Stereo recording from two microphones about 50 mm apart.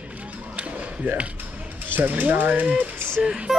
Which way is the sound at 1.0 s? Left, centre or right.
Right.